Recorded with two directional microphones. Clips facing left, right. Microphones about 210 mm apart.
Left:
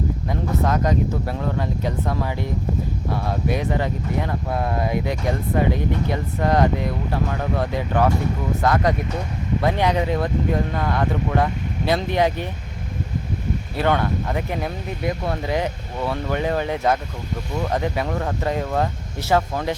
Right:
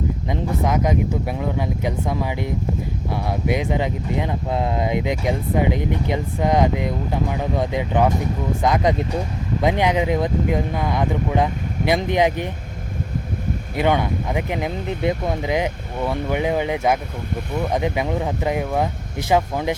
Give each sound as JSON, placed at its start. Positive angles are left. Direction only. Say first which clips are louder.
{"t": 0.3, "sound": "speech", "louder": "even", "side_deg": -15}
{"t": 13.7, "sound": "speech", "louder": "right 1 dB", "side_deg": -15}